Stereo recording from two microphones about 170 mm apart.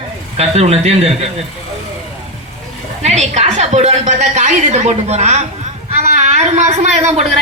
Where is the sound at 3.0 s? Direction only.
40° right (ahead or behind).